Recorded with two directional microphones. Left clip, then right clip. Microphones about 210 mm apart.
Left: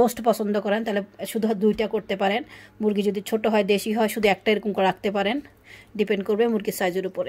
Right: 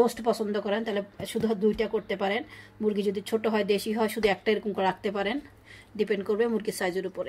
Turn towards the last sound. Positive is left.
turn(degrees=45)  # may be behind; listen again after turning